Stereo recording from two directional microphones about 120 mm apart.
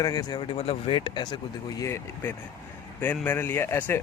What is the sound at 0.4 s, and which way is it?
Speech, 55° left (ahead or behind).